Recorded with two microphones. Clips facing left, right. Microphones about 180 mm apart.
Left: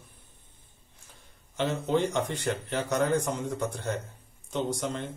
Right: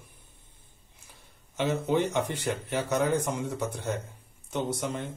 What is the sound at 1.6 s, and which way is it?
A man's voice, 10° right (ahead or behind).